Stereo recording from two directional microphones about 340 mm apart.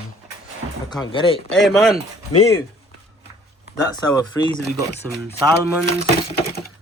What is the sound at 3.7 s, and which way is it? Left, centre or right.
Speech, centre.